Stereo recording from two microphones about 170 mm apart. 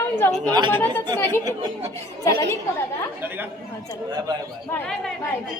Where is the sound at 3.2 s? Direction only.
10° right (ahead or behind).